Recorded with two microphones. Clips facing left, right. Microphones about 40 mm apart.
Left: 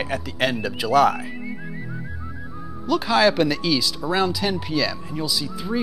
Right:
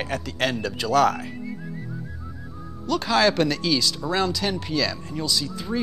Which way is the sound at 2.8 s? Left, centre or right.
Centre.